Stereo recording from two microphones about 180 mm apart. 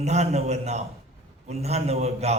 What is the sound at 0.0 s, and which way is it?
A man's voice, 40° right (ahead or behind).